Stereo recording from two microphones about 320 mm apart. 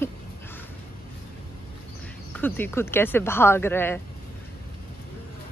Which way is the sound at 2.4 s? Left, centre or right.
Centre.